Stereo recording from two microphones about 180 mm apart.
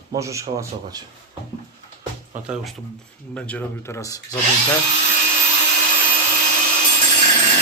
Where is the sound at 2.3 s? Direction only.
5° right (ahead or behind).